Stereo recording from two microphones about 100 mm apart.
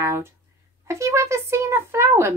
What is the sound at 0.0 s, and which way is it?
A woman's voice, 30° right (ahead or behind).